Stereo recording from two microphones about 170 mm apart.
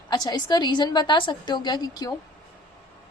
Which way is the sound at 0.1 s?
25° left (ahead or behind).